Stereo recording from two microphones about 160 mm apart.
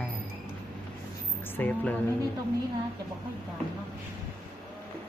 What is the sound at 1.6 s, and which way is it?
Speech, 10° left (ahead or behind).